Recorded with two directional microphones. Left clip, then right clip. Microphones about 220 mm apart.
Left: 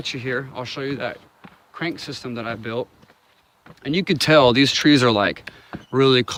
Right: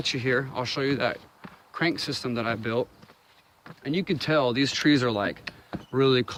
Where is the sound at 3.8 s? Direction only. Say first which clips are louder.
Left 7 dB; 45° left (ahead or behind).